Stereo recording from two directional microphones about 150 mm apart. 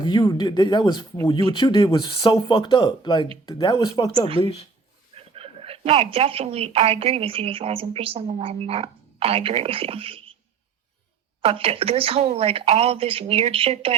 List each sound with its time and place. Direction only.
0.0 s speech: 30° left (ahead or behind)
5.1 s speech: 40° right (ahead or behind)
11.4 s a woman's voice: 40° right (ahead or behind)